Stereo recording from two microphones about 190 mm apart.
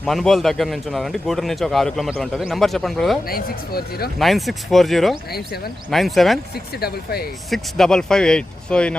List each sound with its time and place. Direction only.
0.0 s a man's voice: centre (ahead or behind)
3.2 s speech: 50° left (ahead or behind)
4.2 s a man's voice: centre (ahead or behind)
5.3 s speech: 55° left (ahead or behind)
5.9 s a man's voice: centre (ahead or behind)
6.7 s speech: 55° left (ahead or behind)
7.5 s a man's voice: centre (ahead or behind)